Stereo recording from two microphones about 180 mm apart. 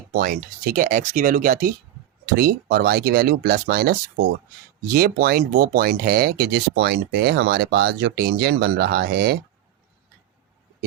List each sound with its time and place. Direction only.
0.1 s speech: 55° right (ahead or behind)
2.2 s speech: 60° right (ahead or behind)